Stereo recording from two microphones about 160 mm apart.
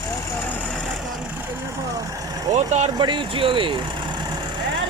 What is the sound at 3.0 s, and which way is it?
Speech, 30° right (ahead or behind).